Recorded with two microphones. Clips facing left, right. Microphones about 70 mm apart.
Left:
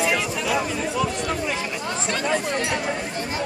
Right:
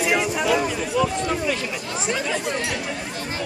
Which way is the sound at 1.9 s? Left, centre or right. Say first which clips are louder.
Right 4 dB; centre.